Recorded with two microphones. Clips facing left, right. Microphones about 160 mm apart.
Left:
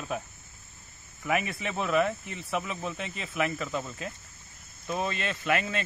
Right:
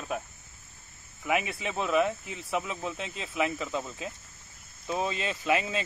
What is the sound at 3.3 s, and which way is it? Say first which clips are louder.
Speech: even; 15° right (ahead or behind).